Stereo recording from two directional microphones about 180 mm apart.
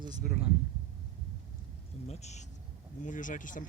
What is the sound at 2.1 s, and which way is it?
Speech, 40° left (ahead or behind).